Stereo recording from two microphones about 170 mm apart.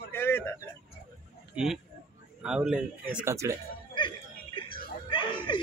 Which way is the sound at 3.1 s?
15° right (ahead or behind).